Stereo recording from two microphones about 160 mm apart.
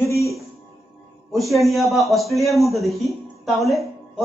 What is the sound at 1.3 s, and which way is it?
Speech, centre (ahead or behind).